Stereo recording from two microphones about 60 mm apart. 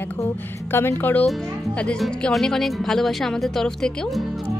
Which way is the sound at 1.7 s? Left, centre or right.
Centre.